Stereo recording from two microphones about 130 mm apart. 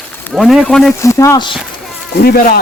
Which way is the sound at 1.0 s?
25° left (ahead or behind).